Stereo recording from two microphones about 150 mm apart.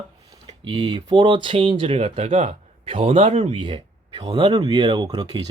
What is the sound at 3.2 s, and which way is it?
Speech, 50° right (ahead or behind).